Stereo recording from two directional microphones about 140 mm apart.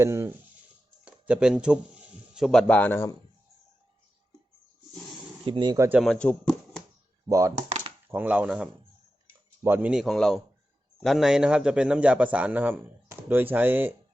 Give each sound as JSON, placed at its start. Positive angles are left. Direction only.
{"t": 0.0, "sound": "speech", "side_deg": -20}
{"t": 1.0, "sound": "speech", "side_deg": -5}
{"t": 5.5, "sound": "speech", "side_deg": -35}
{"t": 5.7, "sound": "a man's voice", "side_deg": -20}
{"t": 6.0, "sound": "speech", "side_deg": 5}
{"t": 7.3, "sound": "a man's voice", "side_deg": -25}